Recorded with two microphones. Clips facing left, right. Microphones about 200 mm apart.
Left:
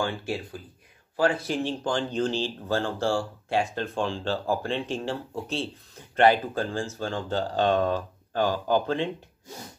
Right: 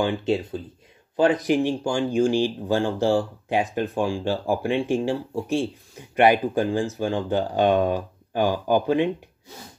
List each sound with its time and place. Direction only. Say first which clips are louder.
0.0 s speech: right 7 dB; 20° right (ahead or behind)